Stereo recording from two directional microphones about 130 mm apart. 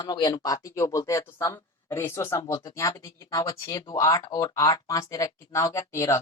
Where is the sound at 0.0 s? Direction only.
35° left (ahead or behind).